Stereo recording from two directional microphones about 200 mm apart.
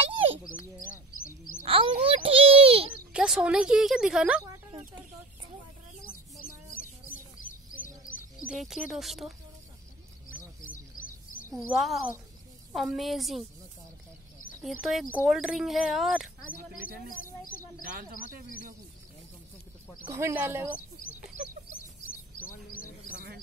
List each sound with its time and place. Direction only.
0.0 s bird: 30° right (ahead or behind)
1.6 s a sound: 30° right (ahead or behind)
3.1 s speech: 5° right (ahead or behind)
6.4 s bird: 45° left (ahead or behind)
8.5 s speech: centre (ahead or behind)
10.3 s a sound: 45° left (ahead or behind)
11.5 s speech: centre (ahead or behind)
14.8 s speech: centre (ahead or behind)
20.1 s speech: 15° right (ahead or behind)